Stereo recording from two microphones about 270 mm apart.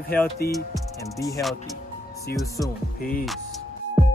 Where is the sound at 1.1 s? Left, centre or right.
Centre.